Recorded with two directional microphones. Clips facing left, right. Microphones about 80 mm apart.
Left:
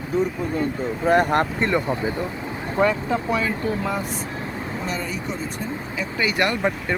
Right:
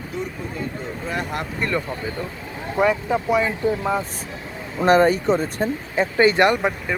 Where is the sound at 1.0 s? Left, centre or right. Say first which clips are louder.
Left 10 dB; left.